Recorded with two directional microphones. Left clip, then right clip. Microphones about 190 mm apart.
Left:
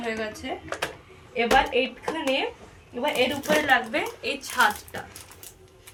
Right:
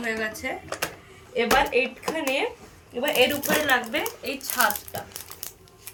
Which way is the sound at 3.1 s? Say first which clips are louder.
Right 2 dB; 20° right (ahead or behind).